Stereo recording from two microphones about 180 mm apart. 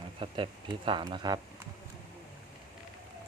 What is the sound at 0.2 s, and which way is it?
Speech, 30° right (ahead or behind).